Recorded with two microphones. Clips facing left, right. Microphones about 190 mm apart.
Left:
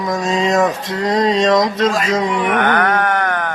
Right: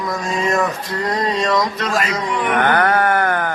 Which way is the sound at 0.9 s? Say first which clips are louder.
Left 5 dB; 90° left.